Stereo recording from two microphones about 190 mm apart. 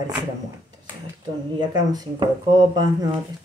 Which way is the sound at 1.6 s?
20° right (ahead or behind).